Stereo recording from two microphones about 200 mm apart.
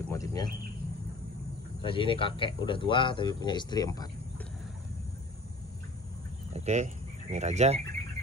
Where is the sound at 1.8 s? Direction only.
25° left (ahead or behind).